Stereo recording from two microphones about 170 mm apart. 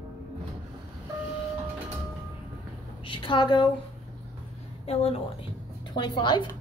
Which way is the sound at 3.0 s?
30° left (ahead or behind).